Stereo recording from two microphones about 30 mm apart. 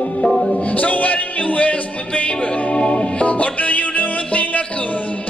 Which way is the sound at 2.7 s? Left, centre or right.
Left.